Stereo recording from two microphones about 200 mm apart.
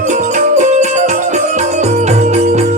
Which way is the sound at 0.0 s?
35° right (ahead or behind).